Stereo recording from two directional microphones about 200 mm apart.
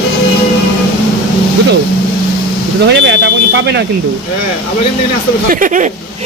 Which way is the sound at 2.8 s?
60° right (ahead or behind).